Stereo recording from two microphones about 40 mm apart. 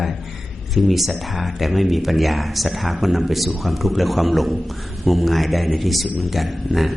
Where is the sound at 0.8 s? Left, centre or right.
Centre.